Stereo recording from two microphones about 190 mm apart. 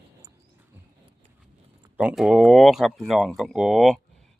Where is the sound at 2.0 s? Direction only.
5° right (ahead or behind).